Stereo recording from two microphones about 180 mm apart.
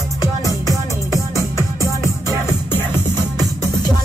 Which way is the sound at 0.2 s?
20° left (ahead or behind).